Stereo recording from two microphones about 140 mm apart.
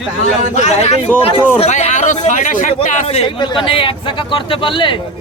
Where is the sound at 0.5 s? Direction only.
55° left (ahead or behind).